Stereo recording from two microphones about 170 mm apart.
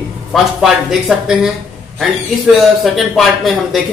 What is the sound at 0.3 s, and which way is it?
Speech, centre (ahead or behind).